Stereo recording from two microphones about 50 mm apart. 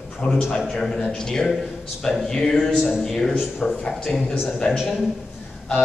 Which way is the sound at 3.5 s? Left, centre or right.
Centre.